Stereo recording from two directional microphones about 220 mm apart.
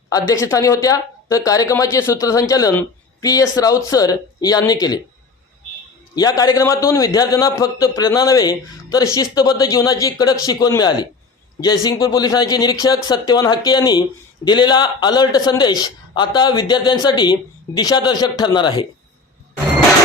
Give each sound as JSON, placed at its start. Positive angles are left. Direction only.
{"t": 0.1, "sound": "a man's voice", "side_deg": 15}
{"t": 6.1, "sound": "a man's voice", "side_deg": 15}